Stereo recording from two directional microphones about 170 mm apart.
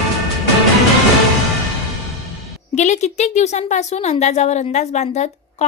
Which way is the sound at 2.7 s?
45° left (ahead or behind).